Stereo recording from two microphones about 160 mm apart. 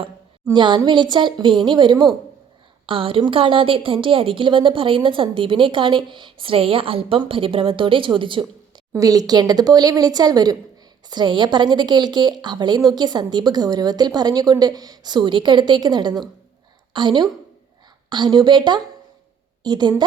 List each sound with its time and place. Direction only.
0.5 s a woman's voice: 30° right (ahead or behind)
8.9 s a woman's voice: 20° right (ahead or behind)